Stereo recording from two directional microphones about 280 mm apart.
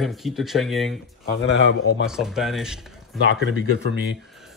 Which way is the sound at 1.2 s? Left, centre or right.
Left.